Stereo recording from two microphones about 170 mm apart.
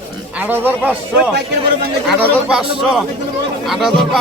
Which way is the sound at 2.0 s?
5° right (ahead or behind).